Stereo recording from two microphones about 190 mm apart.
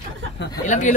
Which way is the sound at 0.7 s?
40° left (ahead or behind).